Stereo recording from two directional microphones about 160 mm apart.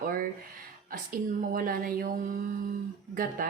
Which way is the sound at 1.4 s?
60° right (ahead or behind).